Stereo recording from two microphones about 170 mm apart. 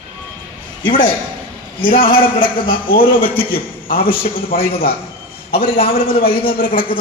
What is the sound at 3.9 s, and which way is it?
Speech, 60° left (ahead or behind).